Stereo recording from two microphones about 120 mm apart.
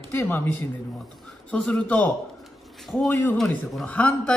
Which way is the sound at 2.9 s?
Centre (ahead or behind).